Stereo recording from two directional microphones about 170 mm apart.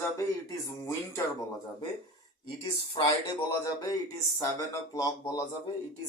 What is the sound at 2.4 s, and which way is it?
Speech, 25° left (ahead or behind).